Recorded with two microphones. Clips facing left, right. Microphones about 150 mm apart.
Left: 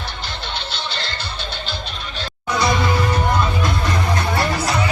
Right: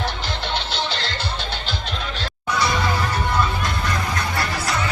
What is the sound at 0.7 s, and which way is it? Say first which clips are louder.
Music: right 2 dB; 90° right.